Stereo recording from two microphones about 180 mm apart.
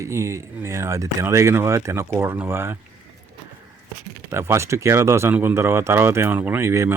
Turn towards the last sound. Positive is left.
turn(degrees=-15)  # may be behind; listen again after turning